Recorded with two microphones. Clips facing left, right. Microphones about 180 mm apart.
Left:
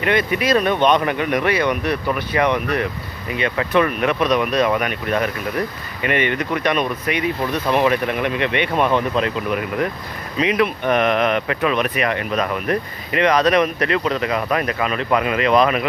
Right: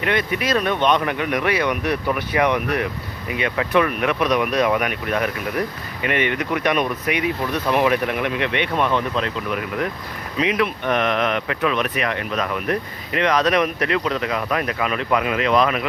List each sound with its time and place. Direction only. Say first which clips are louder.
0.0 s speech: left 3 dB; centre (ahead or behind)